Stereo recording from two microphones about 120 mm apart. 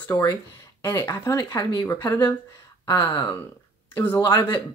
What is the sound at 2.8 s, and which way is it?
Speech, 35° left (ahead or behind).